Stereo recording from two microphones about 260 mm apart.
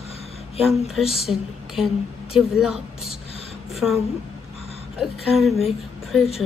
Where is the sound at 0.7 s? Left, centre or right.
Centre.